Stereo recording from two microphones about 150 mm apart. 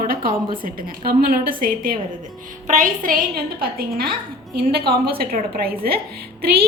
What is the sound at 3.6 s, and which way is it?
A woman's voice, 90° right.